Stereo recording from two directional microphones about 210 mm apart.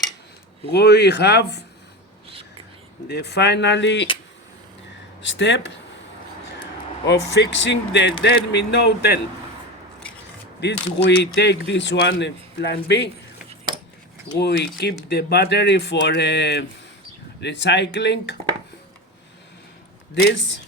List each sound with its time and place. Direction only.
0.7 s speech: 50° left (ahead or behind)
3.1 s speech: 50° left (ahead or behind)
5.2 s speech: 60° left (ahead or behind)
7.1 s speech: 55° left (ahead or behind)
10.6 s speech: 55° left (ahead or behind)
14.3 s speech: 50° left (ahead or behind)